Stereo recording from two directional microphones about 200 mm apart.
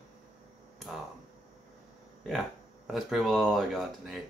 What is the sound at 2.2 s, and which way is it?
Speech, centre (ahead or behind).